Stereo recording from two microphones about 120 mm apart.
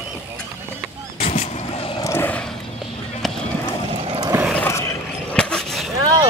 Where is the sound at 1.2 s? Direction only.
55° left (ahead or behind).